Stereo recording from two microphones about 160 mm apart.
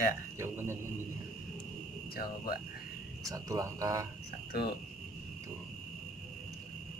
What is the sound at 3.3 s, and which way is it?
Speech, 20° right (ahead or behind).